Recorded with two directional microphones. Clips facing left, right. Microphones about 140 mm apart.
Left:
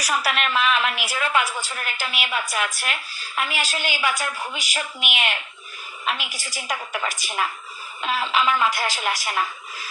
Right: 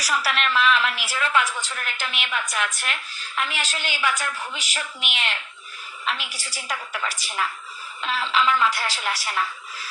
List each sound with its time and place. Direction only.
0.0 s a woman's voice: 15° left (ahead or behind)